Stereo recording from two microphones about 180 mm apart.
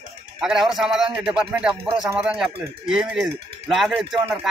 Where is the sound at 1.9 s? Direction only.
25° right (ahead or behind).